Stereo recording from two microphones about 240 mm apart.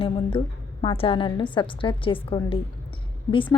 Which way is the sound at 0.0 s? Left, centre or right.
Left.